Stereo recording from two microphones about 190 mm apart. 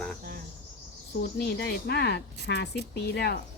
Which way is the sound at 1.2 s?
60° left (ahead or behind).